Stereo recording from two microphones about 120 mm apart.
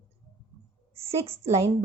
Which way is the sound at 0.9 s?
55° right (ahead or behind).